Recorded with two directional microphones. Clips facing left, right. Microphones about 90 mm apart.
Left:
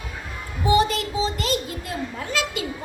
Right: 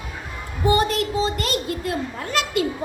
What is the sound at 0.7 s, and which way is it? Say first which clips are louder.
Music: left 1 dB; 50° right (ahead or behind).